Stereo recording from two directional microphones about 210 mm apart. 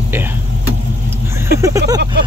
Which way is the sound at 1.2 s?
10° right (ahead or behind).